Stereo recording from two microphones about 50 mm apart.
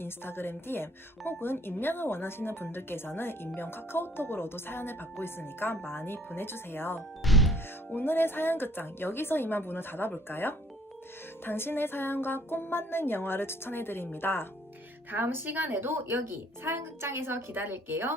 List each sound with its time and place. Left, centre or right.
0.0 s speech: left
7.3 s music: centre
7.9 s speech: left
15.1 s a woman's voice: right